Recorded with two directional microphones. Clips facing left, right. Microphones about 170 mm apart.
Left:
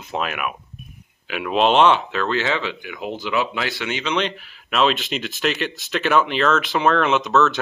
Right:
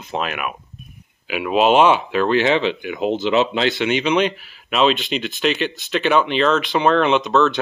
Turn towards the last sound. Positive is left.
turn(degrees=0)  # may be behind; listen again after turning